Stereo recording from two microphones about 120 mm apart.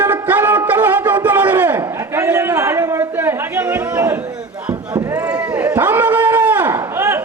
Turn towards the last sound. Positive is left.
turn(degrees=-20)  # may be behind; listen again after turning